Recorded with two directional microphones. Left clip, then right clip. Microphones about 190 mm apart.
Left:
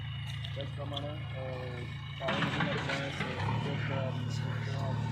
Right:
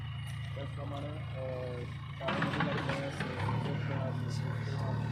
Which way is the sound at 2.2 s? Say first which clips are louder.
Left 1 dB; 35° left (ahead or behind).